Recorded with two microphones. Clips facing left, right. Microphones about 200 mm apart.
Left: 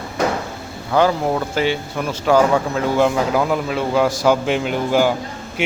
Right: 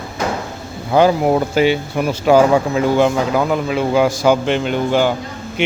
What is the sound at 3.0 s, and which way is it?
A man's voice, centre (ahead or behind).